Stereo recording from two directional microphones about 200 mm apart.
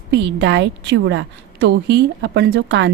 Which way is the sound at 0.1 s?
60° right (ahead or behind).